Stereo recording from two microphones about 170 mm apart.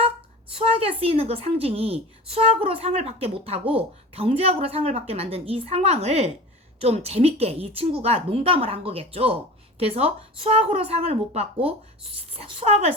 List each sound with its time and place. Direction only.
0.6 s speech: 35° right (ahead or behind)